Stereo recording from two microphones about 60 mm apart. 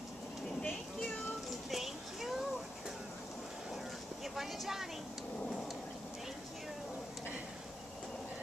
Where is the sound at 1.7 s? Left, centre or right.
Centre.